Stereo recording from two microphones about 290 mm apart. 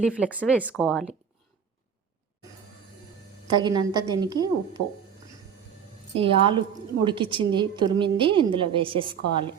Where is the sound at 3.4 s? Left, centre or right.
Centre.